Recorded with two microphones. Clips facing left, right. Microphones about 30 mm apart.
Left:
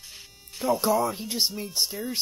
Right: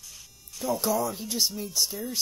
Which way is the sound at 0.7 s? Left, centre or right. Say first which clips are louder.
Left 4 dB; centre.